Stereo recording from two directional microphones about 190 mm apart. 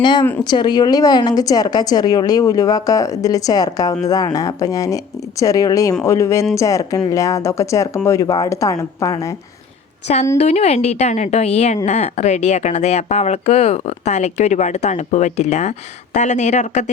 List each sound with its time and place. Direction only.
0.0 s a woman's voice: 25° left (ahead or behind)
10.3 s speech: 35° left (ahead or behind)